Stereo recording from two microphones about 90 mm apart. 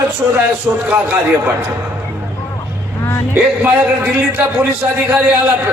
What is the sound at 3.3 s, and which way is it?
A man's voice, 15° right (ahead or behind).